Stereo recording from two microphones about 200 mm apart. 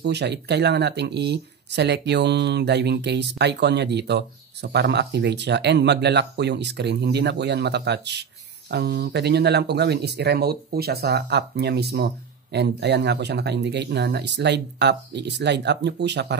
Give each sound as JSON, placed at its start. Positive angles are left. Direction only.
{"t": 0.0, "sound": "speech", "side_deg": -55}